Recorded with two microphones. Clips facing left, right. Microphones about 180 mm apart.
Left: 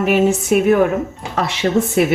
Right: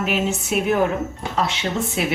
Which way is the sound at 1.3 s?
65° left (ahead or behind).